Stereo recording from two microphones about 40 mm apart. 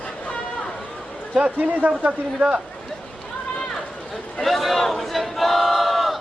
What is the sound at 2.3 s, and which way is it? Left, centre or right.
Speech, right.